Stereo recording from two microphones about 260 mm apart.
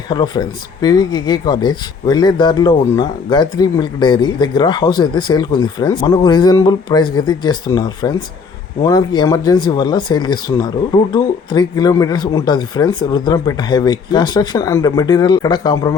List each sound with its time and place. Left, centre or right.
0.1 s speech: centre